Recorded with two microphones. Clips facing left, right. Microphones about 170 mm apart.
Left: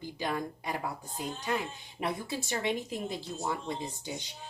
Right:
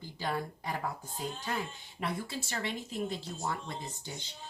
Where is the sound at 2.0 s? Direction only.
20° left (ahead or behind).